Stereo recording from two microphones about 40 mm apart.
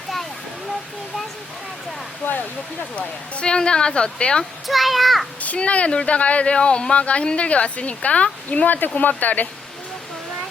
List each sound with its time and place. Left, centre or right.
2.2 s speech: left
2.9 s speech: left
4.6 s a child's voice: centre
5.5 s speech: left
8.6 s speech: left